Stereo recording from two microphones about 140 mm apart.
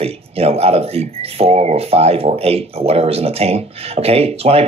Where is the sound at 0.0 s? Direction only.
45° right (ahead or behind).